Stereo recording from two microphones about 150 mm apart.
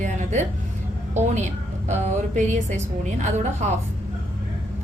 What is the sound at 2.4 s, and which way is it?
A woman's voice, 55° right (ahead or behind).